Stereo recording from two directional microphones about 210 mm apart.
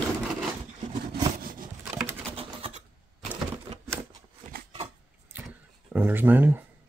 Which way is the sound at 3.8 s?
10° right (ahead or behind).